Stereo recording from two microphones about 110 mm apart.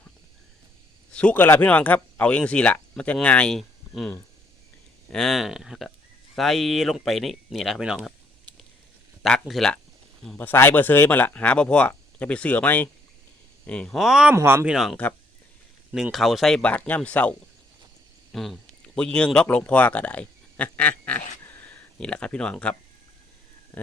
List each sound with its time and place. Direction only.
1.1 s speech: 10° left (ahead or behind)
5.1 s speech: centre (ahead or behind)
9.2 s speech: centre (ahead or behind)
10.3 s speech: 20° left (ahead or behind); by 14.3 s 5° right (ahead or behind)
14.3 s speech: 20° right (ahead or behind)
14.7 s speech: 5° right (ahead or behind)
18.3 s speech: centre (ahead or behind)